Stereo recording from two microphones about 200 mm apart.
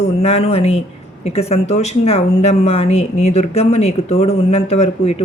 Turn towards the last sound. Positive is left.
turn(degrees=35)  # may be behind; listen again after turning